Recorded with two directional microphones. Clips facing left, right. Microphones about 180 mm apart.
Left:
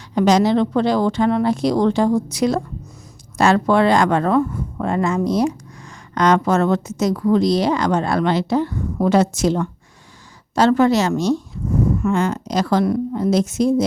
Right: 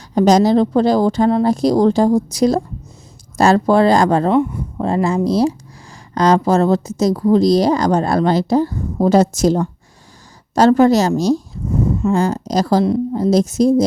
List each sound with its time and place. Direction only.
0.1 s a woman's voice: 40° right (ahead or behind)
12.8 s speech: 25° right (ahead or behind)
13.3 s a woman's voice: 35° right (ahead or behind)